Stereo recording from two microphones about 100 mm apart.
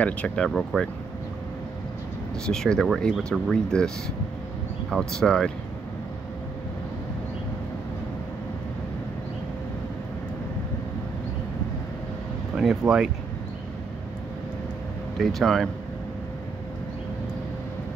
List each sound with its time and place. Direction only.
0.0 s speech: 15° left (ahead or behind)
0.5 s speech: 5° left (ahead or behind)
2.4 s speech: 5° left (ahead or behind)
4.9 s speech: 5° left (ahead or behind)
12.5 s speech: 5° right (ahead or behind)
15.1 s speech: 5° left (ahead or behind)